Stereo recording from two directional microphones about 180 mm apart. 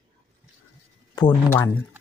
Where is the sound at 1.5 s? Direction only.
15° left (ahead or behind).